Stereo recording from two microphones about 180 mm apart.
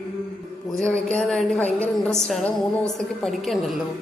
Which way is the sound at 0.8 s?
5° left (ahead or behind).